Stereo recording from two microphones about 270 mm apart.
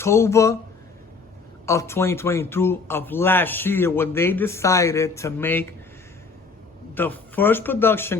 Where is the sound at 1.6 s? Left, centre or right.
Centre.